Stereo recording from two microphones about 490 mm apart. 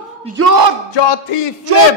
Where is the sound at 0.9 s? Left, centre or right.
Left.